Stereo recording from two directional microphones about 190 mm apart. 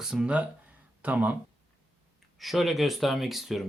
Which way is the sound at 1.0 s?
10° right (ahead or behind).